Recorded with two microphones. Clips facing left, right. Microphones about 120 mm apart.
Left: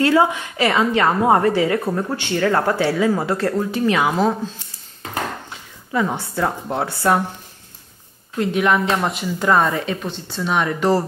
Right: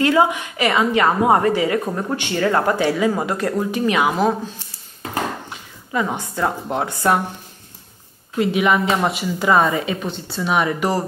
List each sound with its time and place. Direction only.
0.0 s a woman's voice: 15° right (ahead or behind)
8.4 s speech: 5° right (ahead or behind)